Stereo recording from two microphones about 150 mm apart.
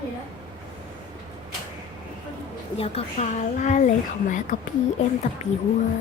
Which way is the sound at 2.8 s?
45° left (ahead or behind).